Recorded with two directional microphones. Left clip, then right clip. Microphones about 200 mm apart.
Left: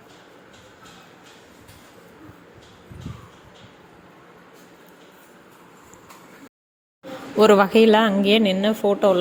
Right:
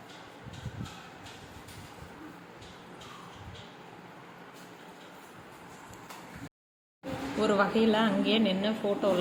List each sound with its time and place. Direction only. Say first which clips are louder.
7.3 s a woman's voice: left 13 dB; 45° left (ahead or behind)